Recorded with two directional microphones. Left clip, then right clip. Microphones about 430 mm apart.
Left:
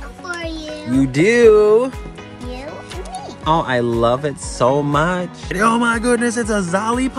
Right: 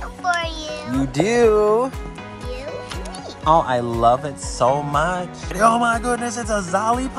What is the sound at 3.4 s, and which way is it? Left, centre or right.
Speech, centre.